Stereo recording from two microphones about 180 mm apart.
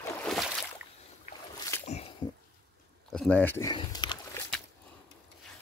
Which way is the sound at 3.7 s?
25° left (ahead or behind).